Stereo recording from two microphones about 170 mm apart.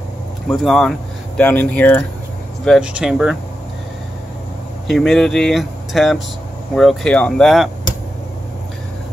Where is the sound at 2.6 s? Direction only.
5° right (ahead or behind).